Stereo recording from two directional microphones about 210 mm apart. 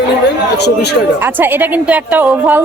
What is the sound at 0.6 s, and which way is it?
Speech, 50° left (ahead or behind).